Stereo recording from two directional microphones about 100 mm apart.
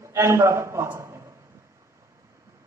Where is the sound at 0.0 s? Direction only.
25° right (ahead or behind).